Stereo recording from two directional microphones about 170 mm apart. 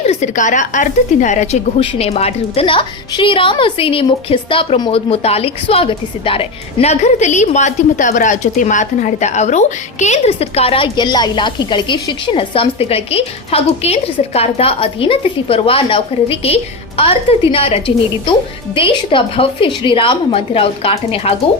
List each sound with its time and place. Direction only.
0.0 s a woman's voice: 40° left (ahead or behind)